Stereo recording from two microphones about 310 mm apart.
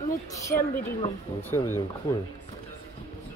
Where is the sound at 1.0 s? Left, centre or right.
Centre.